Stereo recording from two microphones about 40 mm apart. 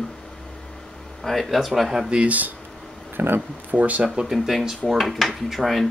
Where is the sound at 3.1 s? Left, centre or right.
Right.